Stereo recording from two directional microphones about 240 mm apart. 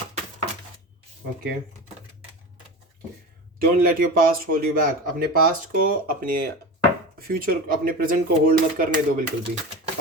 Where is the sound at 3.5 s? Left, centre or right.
Right.